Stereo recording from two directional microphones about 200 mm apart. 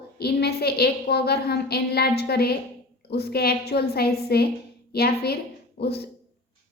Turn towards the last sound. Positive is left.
turn(degrees=55)  # may be behind; listen again after turning